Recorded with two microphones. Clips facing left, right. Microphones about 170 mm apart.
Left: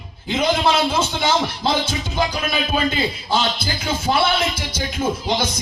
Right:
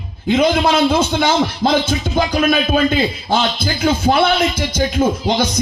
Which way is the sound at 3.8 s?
50° right (ahead or behind).